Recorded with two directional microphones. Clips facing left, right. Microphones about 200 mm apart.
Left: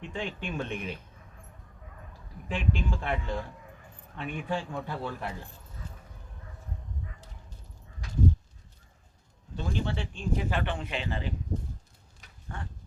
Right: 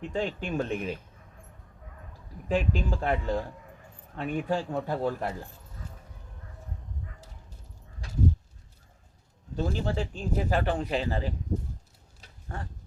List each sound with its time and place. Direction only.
0.0 s speech: 40° right (ahead or behind)
2.5 s speech: 40° right (ahead or behind)
9.6 s speech: 40° right (ahead or behind)
12.2 s a sound: 35° right (ahead or behind)